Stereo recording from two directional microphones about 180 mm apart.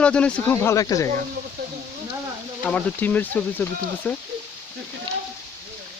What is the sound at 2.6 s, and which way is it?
Speech, 10° left (ahead or behind).